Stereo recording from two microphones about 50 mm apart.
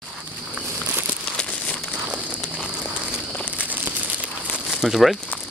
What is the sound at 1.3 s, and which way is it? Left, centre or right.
Crumpling, left.